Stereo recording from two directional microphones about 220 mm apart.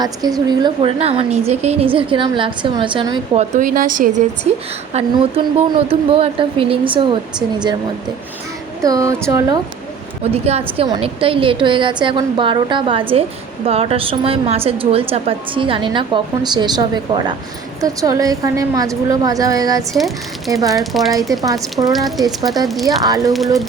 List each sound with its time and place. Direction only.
0.0 s a woman's voice: 15° right (ahead or behind)
3.5 s a woman's voice: 40° right (ahead or behind)
8.8 s a woman's voice: 15° right (ahead or behind)
10.3 s a woman's voice: 30° right (ahead or behind)
19.9 s speech: centre (ahead or behind)
20.5 s a woman's voice: 15° right (ahead or behind)
20.7 s speech: centre (ahead or behind)
21.4 s a woman's voice: 15° right (ahead or behind)
22.6 s speech: centre (ahead or behind)
22.9 s a woman's voice: 15° right (ahead or behind)